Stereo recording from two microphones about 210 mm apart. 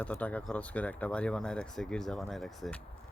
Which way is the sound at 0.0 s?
5° left (ahead or behind).